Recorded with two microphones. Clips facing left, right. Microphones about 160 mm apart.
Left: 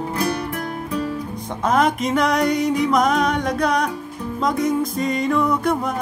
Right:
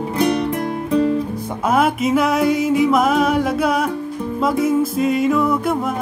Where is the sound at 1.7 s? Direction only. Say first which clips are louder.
Right 2 dB; 5° right (ahead or behind).